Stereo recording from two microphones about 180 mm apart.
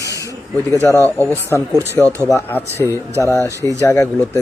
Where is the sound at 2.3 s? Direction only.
15° left (ahead or behind).